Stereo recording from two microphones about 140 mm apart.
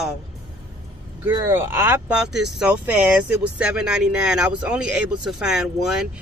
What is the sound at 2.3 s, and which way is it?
Speech, 5° right (ahead or behind).